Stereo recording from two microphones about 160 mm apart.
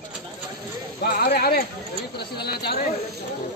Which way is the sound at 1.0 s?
70° left (ahead or behind).